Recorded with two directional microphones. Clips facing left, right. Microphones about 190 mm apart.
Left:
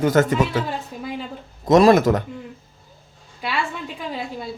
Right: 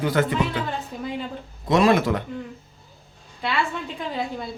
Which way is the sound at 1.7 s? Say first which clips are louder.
Left 5 dB; 40° left (ahead or behind).